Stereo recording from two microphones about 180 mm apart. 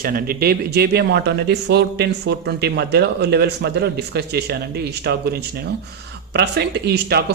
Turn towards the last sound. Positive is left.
turn(degrees=-65)  # may be behind; listen again after turning